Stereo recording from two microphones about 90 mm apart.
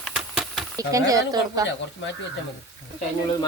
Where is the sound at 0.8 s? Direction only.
40° right (ahead or behind).